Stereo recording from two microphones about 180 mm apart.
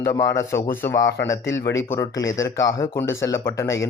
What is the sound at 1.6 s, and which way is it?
Speech, 90° left.